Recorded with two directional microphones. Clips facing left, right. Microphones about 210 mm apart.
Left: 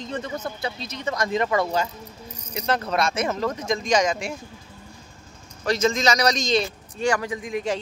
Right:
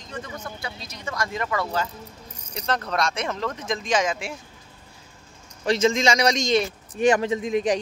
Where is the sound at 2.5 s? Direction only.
5° left (ahead or behind).